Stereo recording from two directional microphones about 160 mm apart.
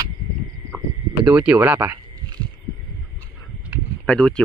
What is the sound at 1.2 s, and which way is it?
Speech, 5° right (ahead or behind).